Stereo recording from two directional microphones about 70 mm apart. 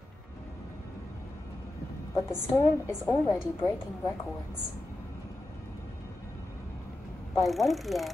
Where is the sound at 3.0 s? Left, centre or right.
Left.